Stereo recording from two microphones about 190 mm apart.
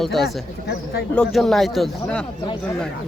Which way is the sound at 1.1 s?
Centre (ahead or behind).